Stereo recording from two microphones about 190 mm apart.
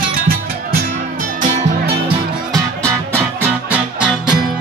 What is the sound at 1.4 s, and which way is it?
Music, 45° right (ahead or behind).